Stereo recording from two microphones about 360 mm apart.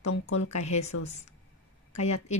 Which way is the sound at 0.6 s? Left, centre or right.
Centre.